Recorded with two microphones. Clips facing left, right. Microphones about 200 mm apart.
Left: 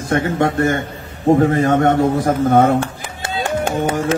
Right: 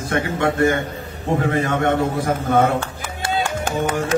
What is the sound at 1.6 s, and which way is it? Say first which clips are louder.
A man's voice: left 5 dB; 40° left (ahead or behind).